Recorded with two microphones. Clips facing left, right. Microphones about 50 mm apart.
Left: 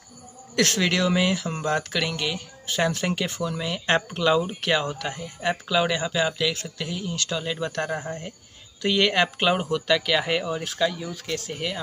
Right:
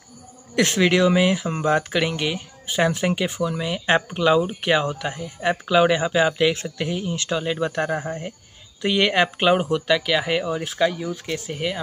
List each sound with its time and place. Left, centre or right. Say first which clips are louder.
0.6 s speech: right 4 dB; centre